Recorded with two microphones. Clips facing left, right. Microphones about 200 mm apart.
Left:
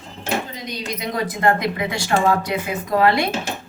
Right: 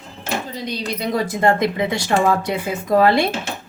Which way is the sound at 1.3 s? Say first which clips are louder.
Right 1 dB; 25° right (ahead or behind).